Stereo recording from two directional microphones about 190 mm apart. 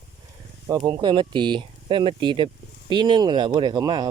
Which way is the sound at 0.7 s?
20° right (ahead or behind).